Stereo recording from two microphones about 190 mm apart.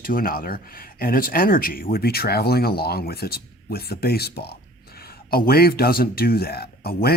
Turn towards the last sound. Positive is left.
turn(degrees=55)  # may be behind; listen again after turning